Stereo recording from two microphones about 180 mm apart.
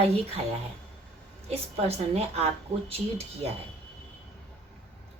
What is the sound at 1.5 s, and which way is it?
A woman's voice, 35° right (ahead or behind).